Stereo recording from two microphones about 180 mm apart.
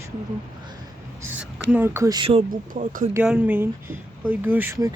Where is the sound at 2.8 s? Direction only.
45° right (ahead or behind).